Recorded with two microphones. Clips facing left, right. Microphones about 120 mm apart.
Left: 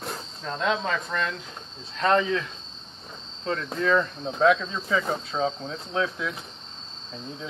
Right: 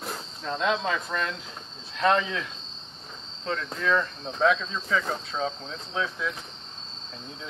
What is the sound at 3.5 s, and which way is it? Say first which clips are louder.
Speech: left 3 dB; 5° left (ahead or behind).